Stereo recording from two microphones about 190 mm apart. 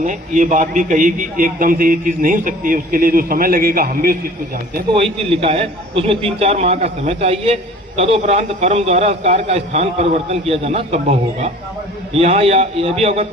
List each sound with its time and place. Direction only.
0.0 s a man's voice: 40° right (ahead or behind)
4.9 s a man's voice: 30° right (ahead or behind)